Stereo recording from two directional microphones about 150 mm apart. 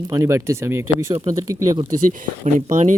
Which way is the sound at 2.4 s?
50° right (ahead or behind).